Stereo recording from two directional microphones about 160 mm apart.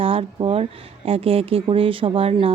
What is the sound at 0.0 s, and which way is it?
Speech, 35° right (ahead or behind).